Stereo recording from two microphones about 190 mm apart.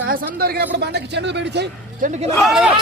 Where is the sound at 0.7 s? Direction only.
60° right (ahead or behind).